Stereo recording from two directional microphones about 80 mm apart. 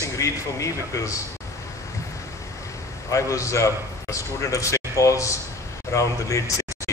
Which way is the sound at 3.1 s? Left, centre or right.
Left.